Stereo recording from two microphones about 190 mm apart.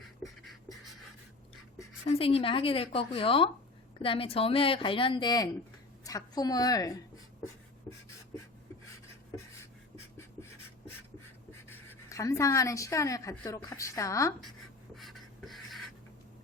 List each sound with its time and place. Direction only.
0.0 s beatboxing: centre (ahead or behind)
2.0 s speech: 30° left (ahead or behind)
11.7 s a woman's voice: 15° left (ahead or behind)
14.9 s beatboxing: centre (ahead or behind)